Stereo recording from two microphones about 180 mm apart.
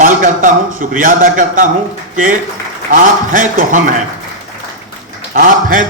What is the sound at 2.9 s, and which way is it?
A man's voice, 50° right (ahead or behind).